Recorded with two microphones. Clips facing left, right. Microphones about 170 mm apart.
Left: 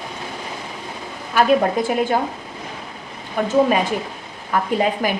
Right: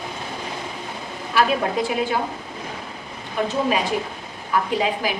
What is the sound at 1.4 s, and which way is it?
Speech, 45° left (ahead or behind).